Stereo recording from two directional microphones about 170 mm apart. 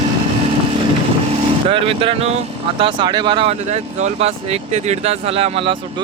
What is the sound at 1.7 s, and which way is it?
Speech, 30° right (ahead or behind).